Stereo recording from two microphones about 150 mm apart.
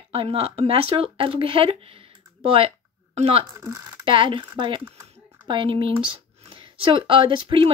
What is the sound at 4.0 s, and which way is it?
Speech, 35° right (ahead or behind).